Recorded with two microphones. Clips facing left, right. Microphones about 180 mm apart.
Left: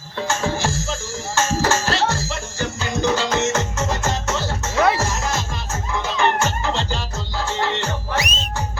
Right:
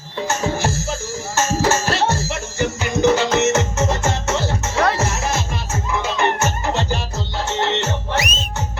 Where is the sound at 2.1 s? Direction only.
20° right (ahead or behind).